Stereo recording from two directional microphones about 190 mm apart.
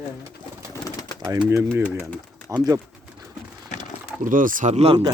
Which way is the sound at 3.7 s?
35° left (ahead or behind).